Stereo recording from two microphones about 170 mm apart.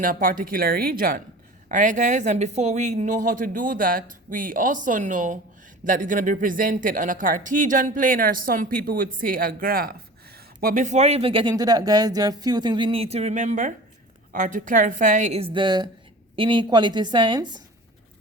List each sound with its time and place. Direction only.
0.0 s a woman's voice: 55° right (ahead or behind); by 17.6 s 25° right (ahead or behind)